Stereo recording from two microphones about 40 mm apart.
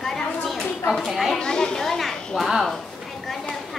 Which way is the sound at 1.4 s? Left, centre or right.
Centre.